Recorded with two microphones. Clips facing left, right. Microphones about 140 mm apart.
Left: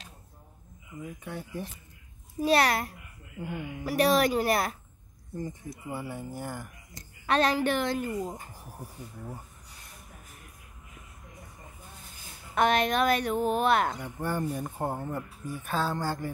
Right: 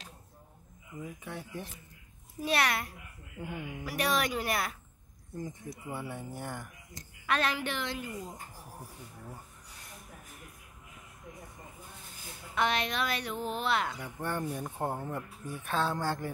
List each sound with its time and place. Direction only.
1.2 s speech: centre (ahead or behind)
2.4 s speech: 35° left (ahead or behind)
3.3 s speech: centre (ahead or behind)
3.8 s speech: 35° left (ahead or behind)
5.3 s speech: centre (ahead or behind)
7.2 s a woman's voice: 35° left (ahead or behind); by 8.4 s 50° left (ahead or behind)
12.5 s a woman's voice: 50° left (ahead or behind)
13.9 s speech: centre (ahead or behind)